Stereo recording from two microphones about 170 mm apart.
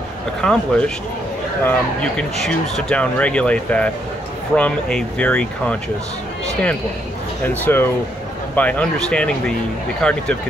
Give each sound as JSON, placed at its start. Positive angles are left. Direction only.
{"t": 0.4, "sound": "speech", "side_deg": 5}
{"t": 7.4, "sound": "speech", "side_deg": 10}